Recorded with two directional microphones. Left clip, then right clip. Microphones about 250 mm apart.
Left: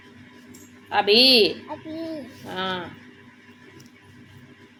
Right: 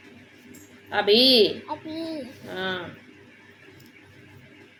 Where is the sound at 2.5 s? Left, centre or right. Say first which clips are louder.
Left 2 dB; centre.